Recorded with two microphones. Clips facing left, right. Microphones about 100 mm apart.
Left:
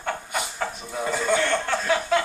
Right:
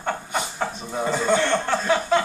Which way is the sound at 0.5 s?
10° right (ahead or behind).